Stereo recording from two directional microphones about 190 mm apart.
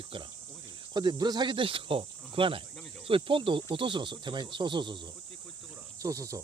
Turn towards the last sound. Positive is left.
turn(degrees=-15)  # may be behind; listen again after turning